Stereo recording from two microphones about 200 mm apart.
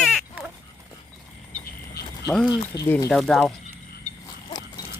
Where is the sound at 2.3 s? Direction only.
Centre (ahead or behind).